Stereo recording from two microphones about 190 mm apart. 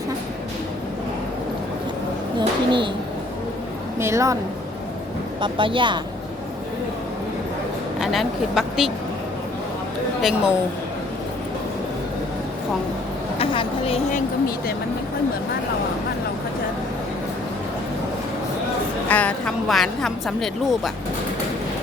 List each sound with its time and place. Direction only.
2.4 s speech: 25° right (ahead or behind)
4.0 s speech: 15° right (ahead or behind)
5.4 s speech: 25° right (ahead or behind)
7.9 s a woman's voice: centre (ahead or behind)
10.2 s a woman's voice: centre (ahead or behind)
13.4 s a woman's voice: 30° left (ahead or behind)
19.0 s a woman's voice: 10° left (ahead or behind)